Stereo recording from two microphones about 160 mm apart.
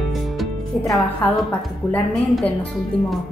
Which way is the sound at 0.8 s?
20° left (ahead or behind).